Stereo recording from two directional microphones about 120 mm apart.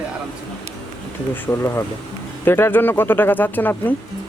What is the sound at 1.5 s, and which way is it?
Speech, 20° left (ahead or behind).